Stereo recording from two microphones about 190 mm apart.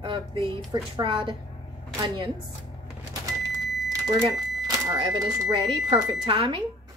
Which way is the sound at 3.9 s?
20° right (ahead or behind).